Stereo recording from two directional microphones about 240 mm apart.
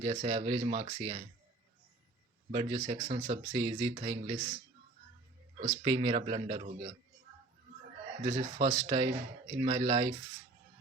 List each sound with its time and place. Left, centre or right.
0.0 s speech: right
2.5 s speech: right
5.6 s speech: right
8.2 s speech: right